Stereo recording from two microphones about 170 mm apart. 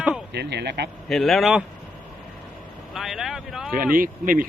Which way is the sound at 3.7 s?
55° right (ahead or behind).